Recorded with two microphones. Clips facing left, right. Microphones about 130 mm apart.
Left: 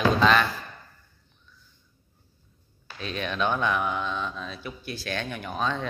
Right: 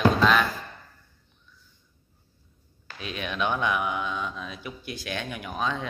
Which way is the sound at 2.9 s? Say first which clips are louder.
Left 2 dB; 10° right (ahead or behind).